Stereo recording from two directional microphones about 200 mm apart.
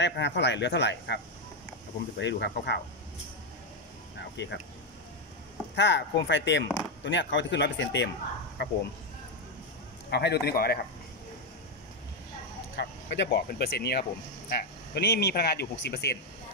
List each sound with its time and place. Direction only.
0.0 s speech: 60° left (ahead or behind)
4.2 s speech: 60° left (ahead or behind)
5.8 s speech: 60° left (ahead or behind)
10.0 s a man's voice: 55° left (ahead or behind)
12.7 s speech: 60° left (ahead or behind)